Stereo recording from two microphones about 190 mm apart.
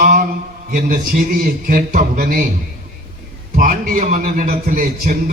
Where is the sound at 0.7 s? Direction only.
45° right (ahead or behind).